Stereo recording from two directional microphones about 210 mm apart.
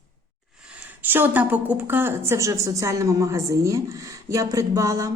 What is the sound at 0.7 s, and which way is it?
A woman's voice, 10° right (ahead or behind).